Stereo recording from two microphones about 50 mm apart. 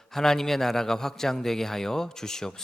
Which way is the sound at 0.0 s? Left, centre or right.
Centre.